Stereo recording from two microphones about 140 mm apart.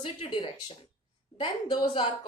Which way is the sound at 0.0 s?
35° left (ahead or behind).